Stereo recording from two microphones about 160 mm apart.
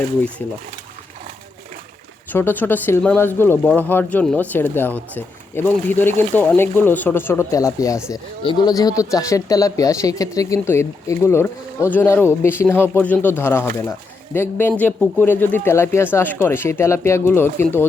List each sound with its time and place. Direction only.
2.3 s speech: 10° left (ahead or behind)